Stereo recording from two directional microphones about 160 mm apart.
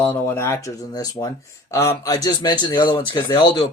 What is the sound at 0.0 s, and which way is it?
A man's voice, 15° left (ahead or behind).